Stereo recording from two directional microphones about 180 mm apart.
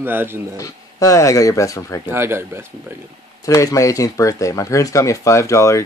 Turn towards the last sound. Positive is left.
turn(degrees=15)  # may be behind; listen again after turning